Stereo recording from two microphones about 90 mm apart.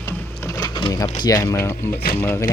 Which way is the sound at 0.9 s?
40° left (ahead or behind).